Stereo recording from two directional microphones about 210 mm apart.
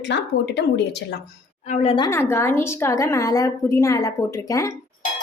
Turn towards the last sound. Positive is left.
turn(degrees=15)  # may be behind; listen again after turning